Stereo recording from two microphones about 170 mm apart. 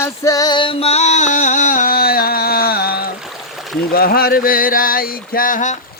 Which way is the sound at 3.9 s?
65° left (ahead or behind).